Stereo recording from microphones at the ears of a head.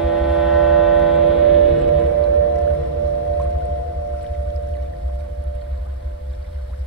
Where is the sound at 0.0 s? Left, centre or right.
Right.